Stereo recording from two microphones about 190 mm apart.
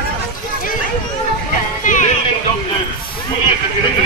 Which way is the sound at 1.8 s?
40° left (ahead or behind).